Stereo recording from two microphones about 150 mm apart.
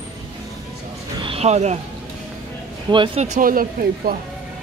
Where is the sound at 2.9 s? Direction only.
35° right (ahead or behind).